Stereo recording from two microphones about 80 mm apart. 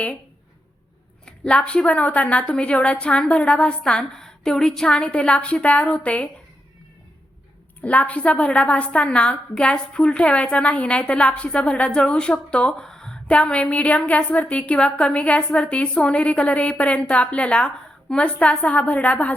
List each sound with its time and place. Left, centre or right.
1.2 s a woman's voice: centre
7.8 s a woman's voice: centre